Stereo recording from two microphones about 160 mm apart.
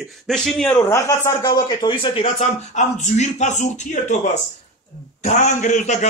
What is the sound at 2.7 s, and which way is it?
Speech, 50° left (ahead or behind).